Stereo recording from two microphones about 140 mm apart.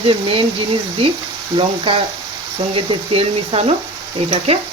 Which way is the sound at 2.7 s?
40° right (ahead or behind).